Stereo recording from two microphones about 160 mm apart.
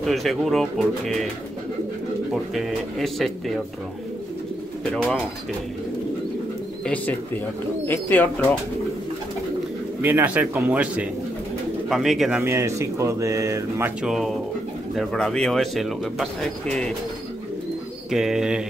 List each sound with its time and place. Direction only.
0.0 s speech: centre (ahead or behind)
2.3 s speech: centre (ahead or behind)
4.9 s speech: 5° left (ahead or behind)
6.8 s speech: 10° left (ahead or behind)
10.0 s speech: 10° right (ahead or behind)
12.4 s speech: 20° right (ahead or behind)
14.0 s speech: centre (ahead or behind)
18.1 s speech: 5° right (ahead or behind)